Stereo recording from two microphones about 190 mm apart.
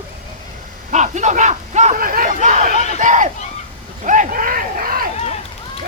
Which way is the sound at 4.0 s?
40° right (ahead or behind).